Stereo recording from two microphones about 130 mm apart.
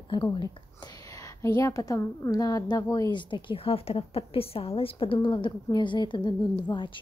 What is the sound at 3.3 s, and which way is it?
A woman's voice, 45° left (ahead or behind).